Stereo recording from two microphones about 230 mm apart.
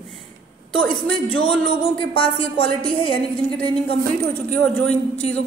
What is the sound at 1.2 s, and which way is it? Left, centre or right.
Speech, left.